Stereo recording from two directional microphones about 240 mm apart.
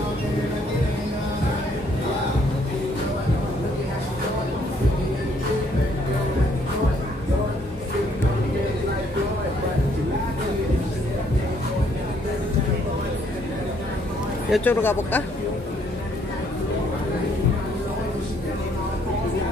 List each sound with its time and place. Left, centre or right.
14.5 s speech: centre